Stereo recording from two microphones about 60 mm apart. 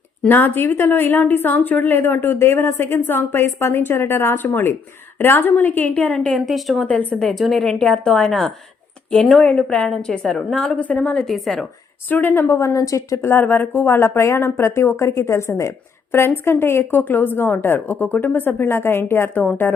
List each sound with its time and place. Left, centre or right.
0.3 s a woman's voice: left
4.4 s a woman's voice: left
6.3 s a woman's voice: centre
9.4 s speech: centre
9.9 s a woman's voice: centre
11.3 s a woman's voice: centre
12.0 s a woman's voice: left
12.5 s speech: left
13.2 s speech: left
16.1 s a woman's voice: left